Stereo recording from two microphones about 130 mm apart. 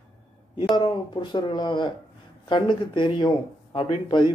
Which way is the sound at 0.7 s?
40° left (ahead or behind).